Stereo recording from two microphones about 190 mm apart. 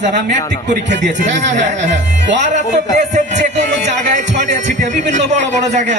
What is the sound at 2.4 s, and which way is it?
A man's voice, 40° right (ahead or behind).